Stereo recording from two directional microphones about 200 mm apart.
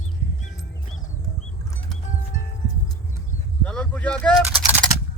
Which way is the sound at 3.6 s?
5° left (ahead or behind).